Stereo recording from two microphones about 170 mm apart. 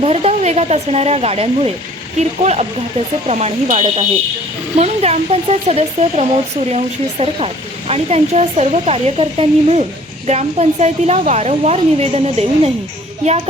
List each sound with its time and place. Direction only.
0.0 s speech: 35° right (ahead or behind)